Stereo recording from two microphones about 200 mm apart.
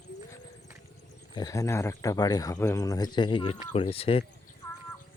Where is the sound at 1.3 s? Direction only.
20° left (ahead or behind).